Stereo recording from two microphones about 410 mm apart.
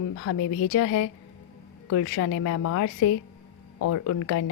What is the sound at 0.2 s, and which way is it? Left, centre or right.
Speech, left.